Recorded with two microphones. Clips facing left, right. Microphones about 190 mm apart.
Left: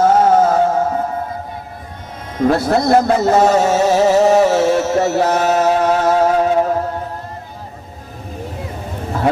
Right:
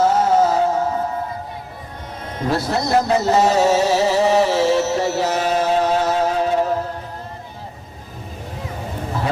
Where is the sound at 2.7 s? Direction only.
55° left (ahead or behind).